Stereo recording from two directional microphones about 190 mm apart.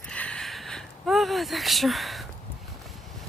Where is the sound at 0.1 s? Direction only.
5° left (ahead or behind).